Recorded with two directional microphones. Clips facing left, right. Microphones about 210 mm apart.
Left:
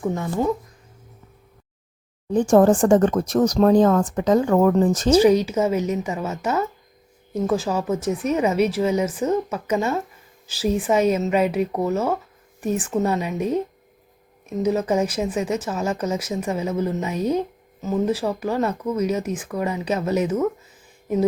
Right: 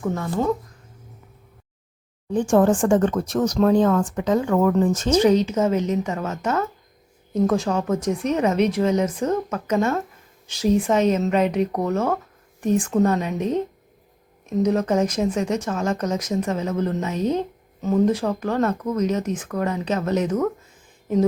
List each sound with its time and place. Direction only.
0.0 s speech: 15° left (ahead or behind)
2.3 s speech: 40° left (ahead or behind)
5.1 s speech: 10° left (ahead or behind)